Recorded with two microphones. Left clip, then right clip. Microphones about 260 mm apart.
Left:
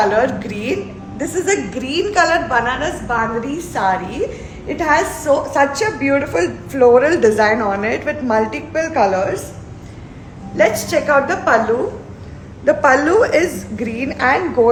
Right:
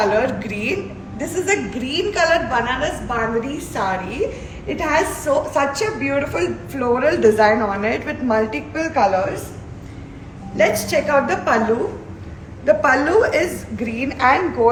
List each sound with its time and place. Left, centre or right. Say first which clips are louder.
0.0 s a woman's voice: left 3 dB; centre; by 9.4 s left
10.6 s a woman's voice: left 2 dB; centre
12.6 s a woman's voice: left 3 dB; left